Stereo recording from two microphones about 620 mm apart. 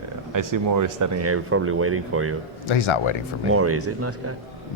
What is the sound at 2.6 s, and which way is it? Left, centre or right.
Speech, left.